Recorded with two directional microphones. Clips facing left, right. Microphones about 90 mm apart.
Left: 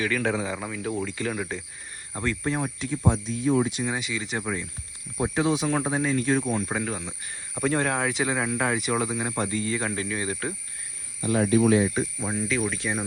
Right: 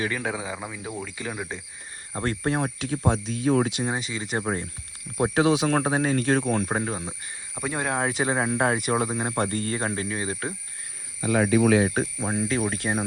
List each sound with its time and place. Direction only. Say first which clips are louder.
0.2 s speech: left 3 dB; 10° right (ahead or behind)
2.2 s speech: right 2 dB; 50° right (ahead or behind)
2.7 s speech: right 1 dB; 80° right
3.1 s speech: right 1 dB; 90° right
3.8 s speech: right 1 dB; 35° right (ahead or behind)
5.1 s speech: right 3 dB; 65° right (ahead or behind)
5.7 s speech: right 2 dB; 55° right (ahead or behind)
6.7 s speech: right 2 dB; 30° right (ahead or behind)
7.1 s speech: even; 5° right (ahead or behind)
8.1 s speech: right 2 dB; 35° right (ahead or behind)
11.6 s speech: right 1 dB; 90° right
12.2 s speech: right 2 dB; 35° right (ahead or behind)